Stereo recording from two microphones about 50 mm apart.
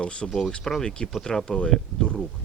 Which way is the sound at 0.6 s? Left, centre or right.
Centre.